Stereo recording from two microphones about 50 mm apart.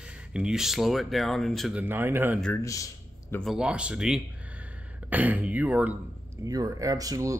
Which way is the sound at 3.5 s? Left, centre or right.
Centre.